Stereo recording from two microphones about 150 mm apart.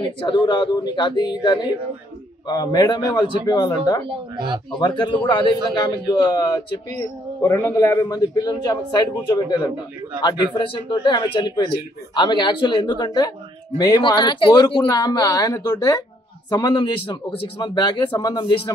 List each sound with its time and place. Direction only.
0.0 s a man's voice: 30° left (ahead or behind)
4.1 s speech: 30° right (ahead or behind)
4.7 s a man's voice: 30° left (ahead or behind)